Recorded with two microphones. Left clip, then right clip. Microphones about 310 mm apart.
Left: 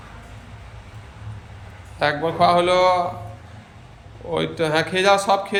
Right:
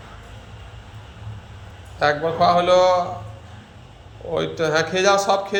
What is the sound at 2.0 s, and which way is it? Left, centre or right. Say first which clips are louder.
Speech: even; centre.